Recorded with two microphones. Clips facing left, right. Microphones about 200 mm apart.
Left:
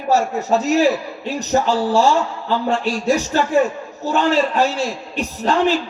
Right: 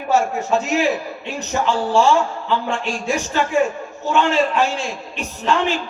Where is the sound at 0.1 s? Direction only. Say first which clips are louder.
Left 1 dB; 35° left (ahead or behind).